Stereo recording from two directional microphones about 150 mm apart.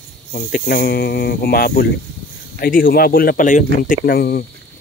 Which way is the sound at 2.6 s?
75° left (ahead or behind).